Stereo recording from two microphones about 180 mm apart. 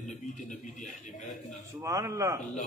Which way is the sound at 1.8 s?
20° right (ahead or behind).